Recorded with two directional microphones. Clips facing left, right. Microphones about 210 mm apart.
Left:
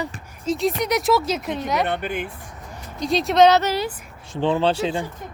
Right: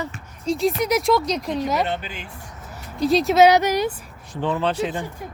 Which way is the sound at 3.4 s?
15° right (ahead or behind).